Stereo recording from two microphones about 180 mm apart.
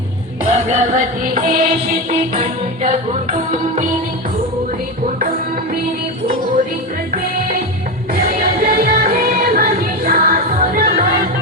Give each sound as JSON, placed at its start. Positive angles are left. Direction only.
{"t": 0.5, "sound": "music", "side_deg": -40}
{"t": 8.1, "sound": "music", "side_deg": -50}